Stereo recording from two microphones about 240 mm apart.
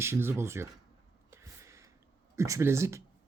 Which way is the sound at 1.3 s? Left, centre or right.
Centre.